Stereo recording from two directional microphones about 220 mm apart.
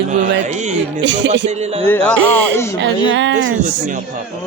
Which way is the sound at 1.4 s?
30° right (ahead or behind).